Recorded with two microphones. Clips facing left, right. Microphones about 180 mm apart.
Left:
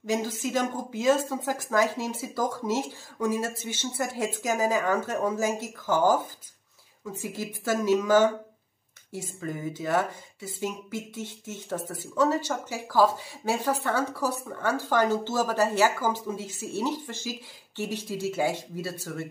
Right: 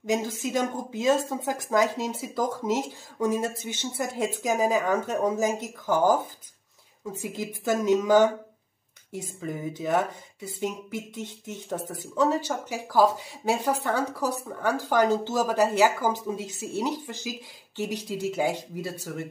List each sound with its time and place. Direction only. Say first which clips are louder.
0.0 s speech: right 1 dB; 20° right (ahead or behind)
7.2 s speech: right 1 dB; 20° right (ahead or behind)